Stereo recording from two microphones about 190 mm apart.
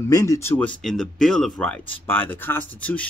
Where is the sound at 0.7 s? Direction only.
5° left (ahead or behind).